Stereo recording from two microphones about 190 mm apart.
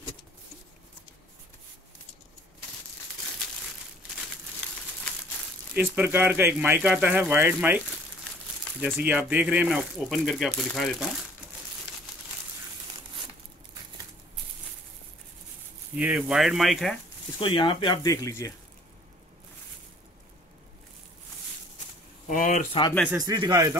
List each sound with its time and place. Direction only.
5.8 s speech: 10° right (ahead or behind)
8.8 s speech: 10° right (ahead or behind)
16.0 s speech: 5° right (ahead or behind)
17.4 s speech: 25° left (ahead or behind)
22.3 s speech: 45° left (ahead or behind)
22.7 s speech: 25° left (ahead or behind)
23.1 s speech: 20° right (ahead or behind)